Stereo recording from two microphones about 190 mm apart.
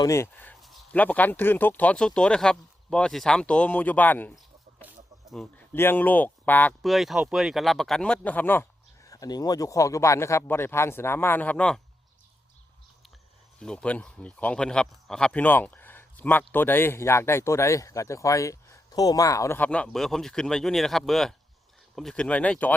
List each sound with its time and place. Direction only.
0.0 s speech: 15° left (ahead or behind)
5.7 s speech: 10° left (ahead or behind)
13.6 s speech: 5° left (ahead or behind)